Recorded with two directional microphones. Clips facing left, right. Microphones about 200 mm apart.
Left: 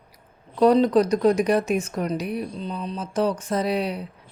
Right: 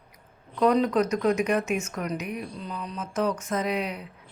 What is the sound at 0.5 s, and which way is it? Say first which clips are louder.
Speech: left 5 dB; 35° left (ahead or behind).